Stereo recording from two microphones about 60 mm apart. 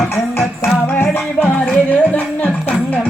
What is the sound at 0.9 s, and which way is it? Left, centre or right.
Music, left.